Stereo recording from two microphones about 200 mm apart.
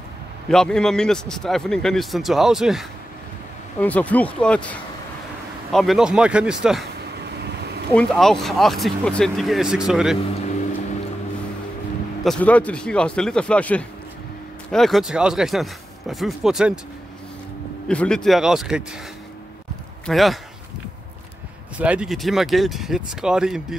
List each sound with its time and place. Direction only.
0.5 s a man's voice: 5° left (ahead or behind)
7.4 s a sound: 55° right (ahead or behind)
7.9 s a man's voice: 5° left (ahead or behind)
12.2 s a man's voice: 5° left (ahead or behind)
17.8 s a man's voice: 5° left (ahead or behind)
20.1 s a man's voice: centre (ahead or behind)
21.7 s a man's voice: 5° right (ahead or behind)